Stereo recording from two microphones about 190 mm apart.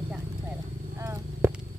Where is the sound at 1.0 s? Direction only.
15° right (ahead or behind).